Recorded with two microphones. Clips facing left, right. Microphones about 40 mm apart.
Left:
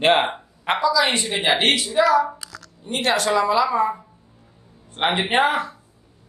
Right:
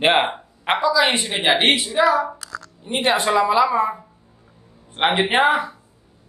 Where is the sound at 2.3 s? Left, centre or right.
Right.